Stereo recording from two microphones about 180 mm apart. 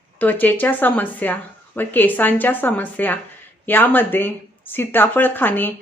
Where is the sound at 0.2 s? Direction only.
10° left (ahead or behind).